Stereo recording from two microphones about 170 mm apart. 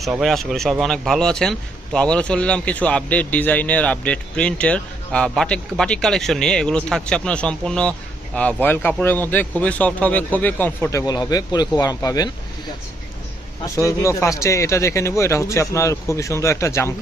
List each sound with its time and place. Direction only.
0.0 s speech: centre (ahead or behind)
11.0 s speech: 25° left (ahead or behind)
13.7 s speech: 15° left (ahead or behind)